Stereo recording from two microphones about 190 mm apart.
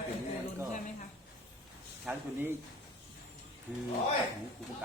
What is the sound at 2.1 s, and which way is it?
Speech, 10° right (ahead or behind).